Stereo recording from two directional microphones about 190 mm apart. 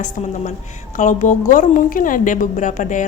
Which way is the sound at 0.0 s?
40° left (ahead or behind).